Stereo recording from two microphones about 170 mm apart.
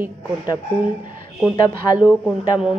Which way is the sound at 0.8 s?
50° right (ahead or behind).